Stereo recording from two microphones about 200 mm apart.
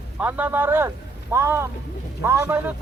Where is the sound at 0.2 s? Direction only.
10° right (ahead or behind).